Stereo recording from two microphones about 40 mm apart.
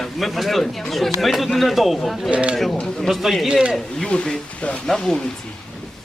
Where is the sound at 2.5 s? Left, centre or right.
Centre.